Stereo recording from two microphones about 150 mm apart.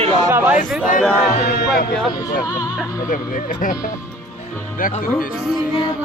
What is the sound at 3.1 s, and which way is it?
Speech, 65° left (ahead or behind).